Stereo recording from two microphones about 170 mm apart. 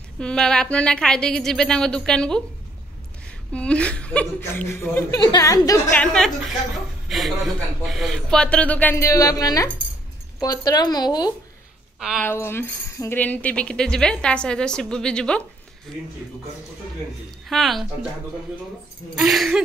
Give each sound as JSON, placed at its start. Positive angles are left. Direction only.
{"t": 0.2, "sound": "speech", "side_deg": 5}
{"t": 3.5, "sound": "speech", "side_deg": 5}
{"t": 5.9, "sound": "speech", "side_deg": 5}
{"t": 12.0, "sound": "speech", "side_deg": -5}
{"t": 12.3, "sound": "speech", "side_deg": 15}
{"t": 17.5, "sound": "speech", "side_deg": 0}
{"t": 19.1, "sound": "speech", "side_deg": 0}